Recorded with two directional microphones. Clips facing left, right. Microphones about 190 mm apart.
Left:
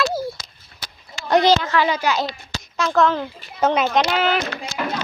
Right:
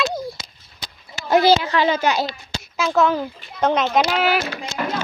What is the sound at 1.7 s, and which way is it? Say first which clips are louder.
Speech: right 1 dB; 25° right (ahead or behind).